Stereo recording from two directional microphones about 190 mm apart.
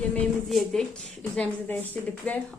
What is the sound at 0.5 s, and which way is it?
Speech, 5° left (ahead or behind).